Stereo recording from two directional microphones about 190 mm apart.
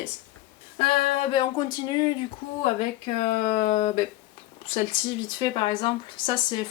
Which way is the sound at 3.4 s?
35° left (ahead or behind).